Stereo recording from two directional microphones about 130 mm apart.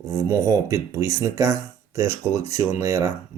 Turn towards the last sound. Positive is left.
turn(degrees=-25)  # may be behind; listen again after turning